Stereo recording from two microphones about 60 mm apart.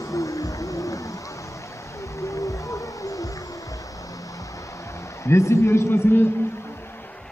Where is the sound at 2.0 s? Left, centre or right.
Left.